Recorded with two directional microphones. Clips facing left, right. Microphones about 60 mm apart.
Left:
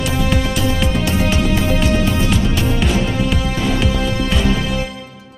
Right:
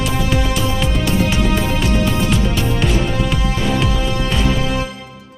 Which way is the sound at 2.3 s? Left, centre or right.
Centre.